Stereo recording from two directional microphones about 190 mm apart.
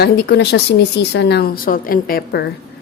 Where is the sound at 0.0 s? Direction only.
65° left (ahead or behind).